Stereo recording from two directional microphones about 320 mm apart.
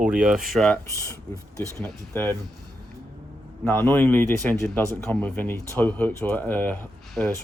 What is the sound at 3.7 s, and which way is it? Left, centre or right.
Speech, centre.